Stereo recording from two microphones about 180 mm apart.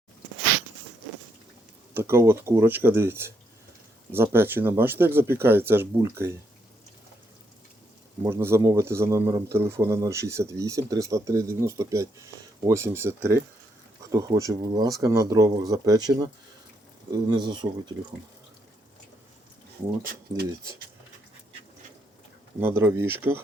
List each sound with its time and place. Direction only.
1.9 s speech: 15° right (ahead or behind)
8.2 s speech: 15° right (ahead or behind)
20.1 s speech: 60° right (ahead or behind)
22.6 s speech: 15° right (ahead or behind)